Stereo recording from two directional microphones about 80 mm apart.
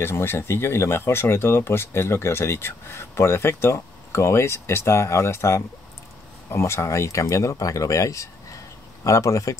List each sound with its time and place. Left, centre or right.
0.0 s speech: left